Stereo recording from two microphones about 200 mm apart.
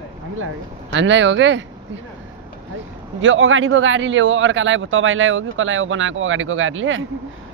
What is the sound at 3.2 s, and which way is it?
A man's voice, 75° right (ahead or behind).